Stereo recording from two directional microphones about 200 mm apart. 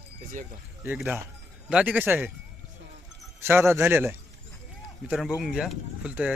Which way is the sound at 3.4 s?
10° right (ahead or behind).